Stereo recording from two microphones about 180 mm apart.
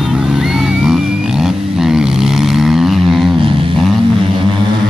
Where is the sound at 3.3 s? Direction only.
30° right (ahead or behind).